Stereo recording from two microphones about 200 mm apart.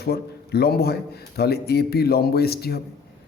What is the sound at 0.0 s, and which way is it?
A man's voice, 55° left (ahead or behind).